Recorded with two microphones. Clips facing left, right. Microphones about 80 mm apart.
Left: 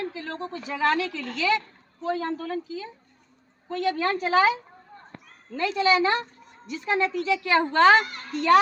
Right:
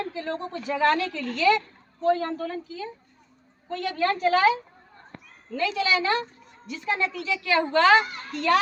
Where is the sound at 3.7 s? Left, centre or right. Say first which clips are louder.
Left 1 dB; centre.